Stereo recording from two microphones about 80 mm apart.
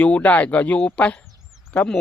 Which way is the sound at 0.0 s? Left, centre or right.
Centre.